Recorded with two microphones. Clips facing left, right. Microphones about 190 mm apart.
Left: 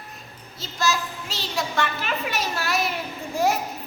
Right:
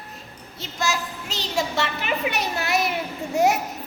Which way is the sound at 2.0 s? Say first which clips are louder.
Right 2 dB; 20° right (ahead or behind).